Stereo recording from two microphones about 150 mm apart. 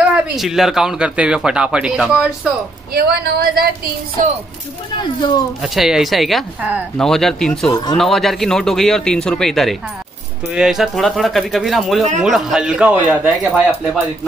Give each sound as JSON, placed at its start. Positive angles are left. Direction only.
{"t": 0.0, "sound": "speech", "side_deg": -5}
{"t": 2.9, "sound": "speech", "side_deg": -90}
{"t": 4.9, "sound": "speech", "side_deg": 30}
{"t": 5.6, "sound": "speech", "side_deg": -5}
{"t": 13.3, "sound": "speech", "side_deg": 0}